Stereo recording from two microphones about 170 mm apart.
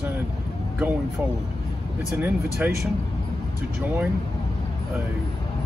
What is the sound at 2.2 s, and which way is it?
Speech, 10° right (ahead or behind).